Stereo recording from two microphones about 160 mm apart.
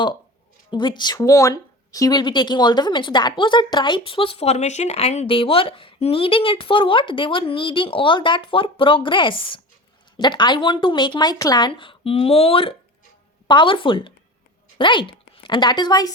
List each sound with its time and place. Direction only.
0.7 s a woman's voice: 30° left (ahead or behind)